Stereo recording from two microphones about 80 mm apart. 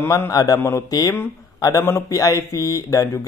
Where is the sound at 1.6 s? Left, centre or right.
Left.